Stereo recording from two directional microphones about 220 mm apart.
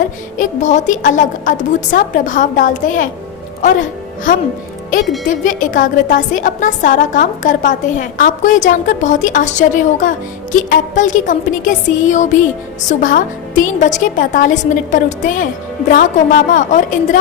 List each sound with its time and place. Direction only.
0.3 s a woman's voice: 35° left (ahead or behind)